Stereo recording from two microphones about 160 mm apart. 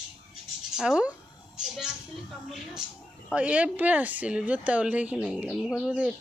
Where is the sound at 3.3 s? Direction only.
10° right (ahead or behind).